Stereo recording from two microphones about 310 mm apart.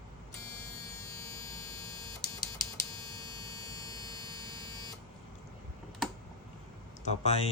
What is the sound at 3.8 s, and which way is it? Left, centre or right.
Buzzer, centre.